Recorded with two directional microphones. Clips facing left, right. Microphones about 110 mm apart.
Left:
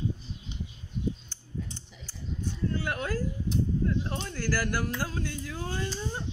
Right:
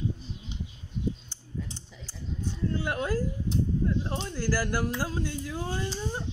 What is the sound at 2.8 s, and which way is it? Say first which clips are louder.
Speech: right 2 dB; 20° right (ahead or behind).